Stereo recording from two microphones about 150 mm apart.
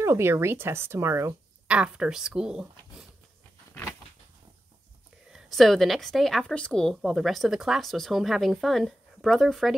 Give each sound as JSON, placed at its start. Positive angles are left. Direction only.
{"t": 0.0, "sound": "speech", "side_deg": -15}
{"t": 1.7, "sound": "a woman's voice", "side_deg": -5}
{"t": 5.3, "sound": "a woman's voice", "side_deg": 0}